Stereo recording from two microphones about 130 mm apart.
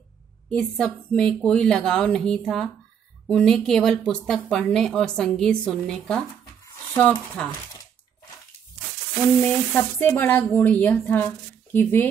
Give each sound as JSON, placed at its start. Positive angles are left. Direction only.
{"t": 0.5, "sound": "a woman's voice", "side_deg": 5}
{"t": 9.4, "sound": "speech", "side_deg": 15}